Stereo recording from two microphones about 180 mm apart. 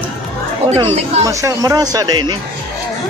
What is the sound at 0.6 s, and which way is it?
Speech, 35° right (ahead or behind).